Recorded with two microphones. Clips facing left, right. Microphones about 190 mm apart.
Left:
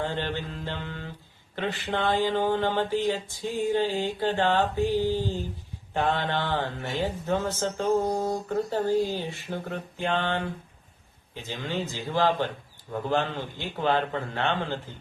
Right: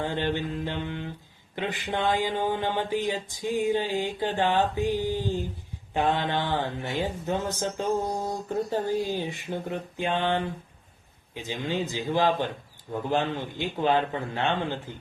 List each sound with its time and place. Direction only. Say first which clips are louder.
0.0 s speech: right 2 dB; 15° right (ahead or behind)